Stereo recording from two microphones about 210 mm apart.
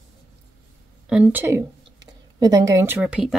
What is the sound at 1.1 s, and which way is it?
A woman's voice, 5° right (ahead or behind).